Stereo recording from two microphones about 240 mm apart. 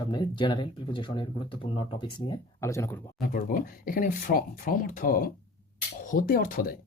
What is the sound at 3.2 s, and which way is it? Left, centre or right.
Speech, left.